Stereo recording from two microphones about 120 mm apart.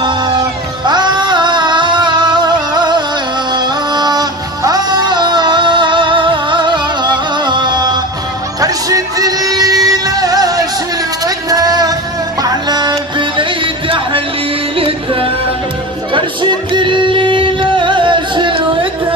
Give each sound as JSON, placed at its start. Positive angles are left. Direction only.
{"t": 0.8, "sound": "music", "side_deg": -35}
{"t": 11.2, "sound": "a sound", "side_deg": -30}
{"t": 12.4, "sound": "music", "side_deg": -35}